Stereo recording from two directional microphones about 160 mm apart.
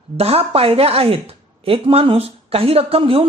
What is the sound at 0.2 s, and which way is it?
Speech, 40° right (ahead or behind).